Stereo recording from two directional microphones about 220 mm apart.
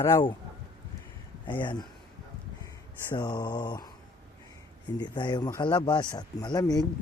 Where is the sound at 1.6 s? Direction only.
20° left (ahead or behind).